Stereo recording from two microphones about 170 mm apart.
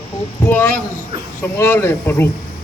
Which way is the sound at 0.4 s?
10° left (ahead or behind).